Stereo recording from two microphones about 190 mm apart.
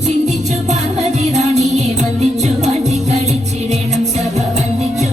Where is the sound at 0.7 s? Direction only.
35° right (ahead or behind).